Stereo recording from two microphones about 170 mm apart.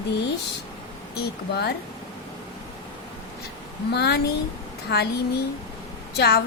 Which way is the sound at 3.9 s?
75° left (ahead or behind).